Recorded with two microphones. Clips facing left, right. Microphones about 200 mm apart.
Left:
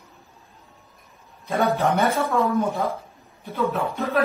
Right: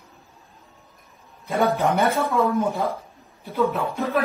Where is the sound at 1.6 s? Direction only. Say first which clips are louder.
Right 1 dB; centre (ahead or behind).